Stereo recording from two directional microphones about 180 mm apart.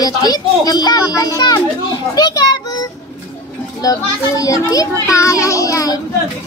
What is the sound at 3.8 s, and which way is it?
Speech, 20° left (ahead or behind).